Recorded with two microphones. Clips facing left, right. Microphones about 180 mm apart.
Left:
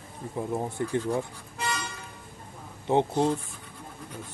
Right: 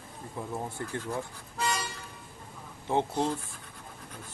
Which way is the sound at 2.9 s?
15° left (ahead or behind).